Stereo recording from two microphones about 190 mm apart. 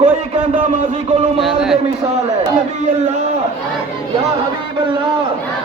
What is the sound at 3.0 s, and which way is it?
Speech, 35° right (ahead or behind).